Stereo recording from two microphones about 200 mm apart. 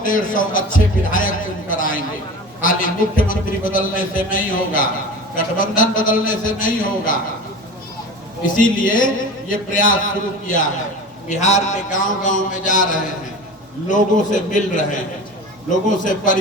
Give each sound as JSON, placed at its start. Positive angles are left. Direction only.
{"t": 0.0, "sound": "a man's voice", "side_deg": 40}
{"t": 8.5, "sound": "a man's voice", "side_deg": 40}
{"t": 11.3, "sound": "a man's voice", "side_deg": 35}